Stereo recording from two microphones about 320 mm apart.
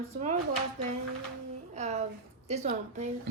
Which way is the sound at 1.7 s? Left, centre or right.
Right.